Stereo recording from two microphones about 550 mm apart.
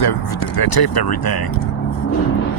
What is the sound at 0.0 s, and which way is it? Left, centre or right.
Speech, left.